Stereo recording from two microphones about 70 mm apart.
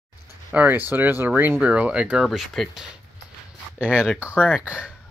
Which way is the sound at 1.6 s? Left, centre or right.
Centre.